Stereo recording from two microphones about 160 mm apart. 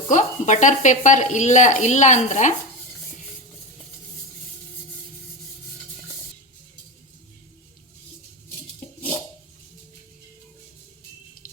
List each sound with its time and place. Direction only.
0.1 s speech: 50° left (ahead or behind)
11.4 s water tap: 60° left (ahead or behind)